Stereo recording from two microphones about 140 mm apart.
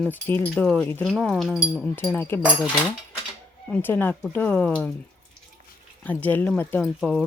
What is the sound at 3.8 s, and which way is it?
Speech, 15° left (ahead or behind).